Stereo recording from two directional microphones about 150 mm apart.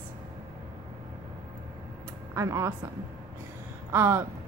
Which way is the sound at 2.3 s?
20° right (ahead or behind).